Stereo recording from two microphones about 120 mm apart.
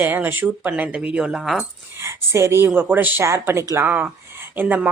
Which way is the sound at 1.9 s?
25° right (ahead or behind).